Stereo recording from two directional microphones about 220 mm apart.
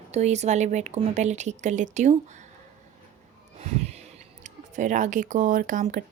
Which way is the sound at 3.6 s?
30° right (ahead or behind).